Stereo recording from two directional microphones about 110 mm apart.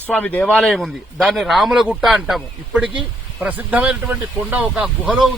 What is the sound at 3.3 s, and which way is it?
Speech, 15° right (ahead or behind).